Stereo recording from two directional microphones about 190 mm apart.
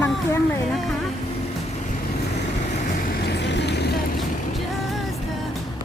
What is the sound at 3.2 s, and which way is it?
Vehicle, 65° left (ahead or behind).